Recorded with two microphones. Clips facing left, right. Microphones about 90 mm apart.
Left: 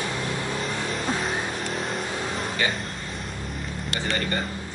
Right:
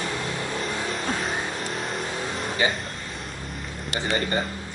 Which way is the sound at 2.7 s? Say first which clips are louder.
Left 1 dB; centre (ahead or behind).